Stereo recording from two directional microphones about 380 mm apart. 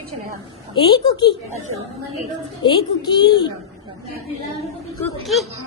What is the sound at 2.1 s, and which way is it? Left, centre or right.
A woman's voice, centre.